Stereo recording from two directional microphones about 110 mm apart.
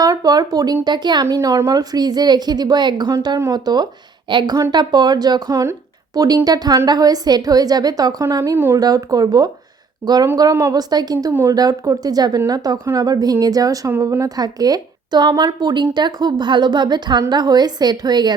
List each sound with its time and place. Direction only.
0.0 s a woman's voice: 35° right (ahead or behind)
3.1 s a woman's voice: 30° right (ahead or behind)
8.8 s a woman's voice: 35° right (ahead or behind)
10.0 s speech: 20° right (ahead or behind)
10.3 s a woman's voice: 35° right (ahead or behind)